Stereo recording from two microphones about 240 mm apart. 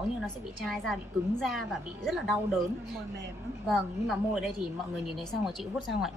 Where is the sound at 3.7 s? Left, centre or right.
Centre.